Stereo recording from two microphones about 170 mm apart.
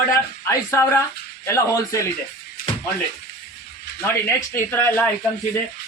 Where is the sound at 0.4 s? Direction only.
15° left (ahead or behind).